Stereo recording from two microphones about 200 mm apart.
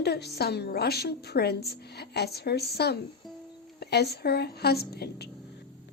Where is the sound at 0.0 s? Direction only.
55° left (ahead or behind).